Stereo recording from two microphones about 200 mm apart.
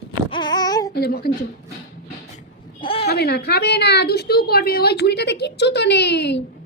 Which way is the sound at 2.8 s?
30° left (ahead or behind).